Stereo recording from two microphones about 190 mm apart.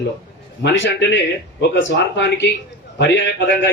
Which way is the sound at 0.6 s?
70° left (ahead or behind).